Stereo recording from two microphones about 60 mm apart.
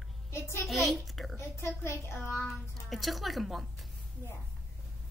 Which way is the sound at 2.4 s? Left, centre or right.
Centre.